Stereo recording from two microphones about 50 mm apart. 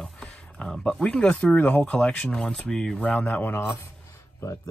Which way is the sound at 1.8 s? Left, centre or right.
Centre.